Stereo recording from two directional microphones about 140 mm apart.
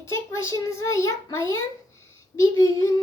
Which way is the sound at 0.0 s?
20° left (ahead or behind).